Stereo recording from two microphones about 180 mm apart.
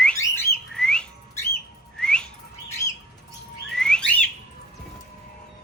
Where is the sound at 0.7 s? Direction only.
5° left (ahead or behind).